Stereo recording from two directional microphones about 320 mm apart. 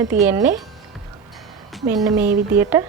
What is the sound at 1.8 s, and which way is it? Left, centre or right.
A woman's voice, centre.